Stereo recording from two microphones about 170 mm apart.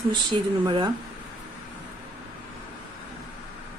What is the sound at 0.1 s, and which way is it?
Speech, 30° right (ahead or behind).